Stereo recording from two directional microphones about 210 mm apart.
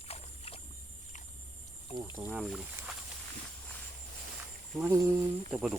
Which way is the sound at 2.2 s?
Centre (ahead or behind).